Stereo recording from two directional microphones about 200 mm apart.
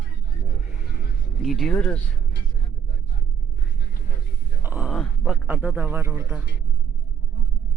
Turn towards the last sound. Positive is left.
turn(degrees=-10)  # may be behind; listen again after turning